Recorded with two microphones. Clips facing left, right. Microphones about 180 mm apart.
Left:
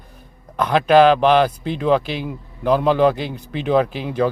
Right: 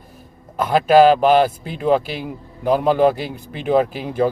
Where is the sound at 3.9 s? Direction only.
45° right (ahead or behind).